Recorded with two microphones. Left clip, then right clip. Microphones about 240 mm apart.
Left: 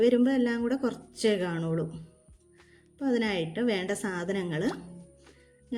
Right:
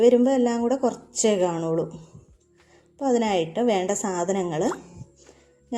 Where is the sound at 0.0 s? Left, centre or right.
Centre.